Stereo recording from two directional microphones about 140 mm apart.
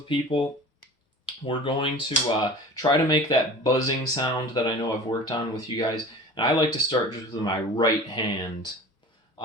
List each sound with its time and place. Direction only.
0.1 s speech: 40° left (ahead or behind)